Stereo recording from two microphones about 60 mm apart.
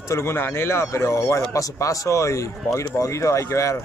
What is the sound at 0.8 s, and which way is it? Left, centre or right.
Speech, left.